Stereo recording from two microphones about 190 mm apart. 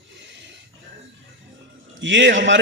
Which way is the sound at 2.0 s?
75° right (ahead or behind).